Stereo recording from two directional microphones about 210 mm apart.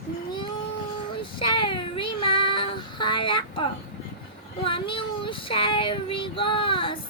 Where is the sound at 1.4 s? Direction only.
25° left (ahead or behind).